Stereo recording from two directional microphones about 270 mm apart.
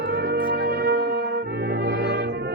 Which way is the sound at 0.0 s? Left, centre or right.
Right.